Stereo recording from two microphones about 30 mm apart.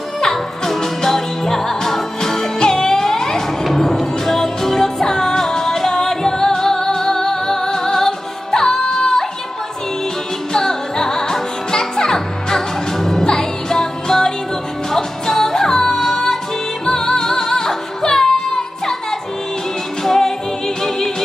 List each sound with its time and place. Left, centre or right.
0.2 s music: centre
10.5 s music: centre
20.0 s music: centre